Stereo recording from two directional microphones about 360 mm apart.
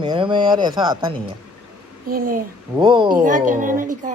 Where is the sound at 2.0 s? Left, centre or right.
Right.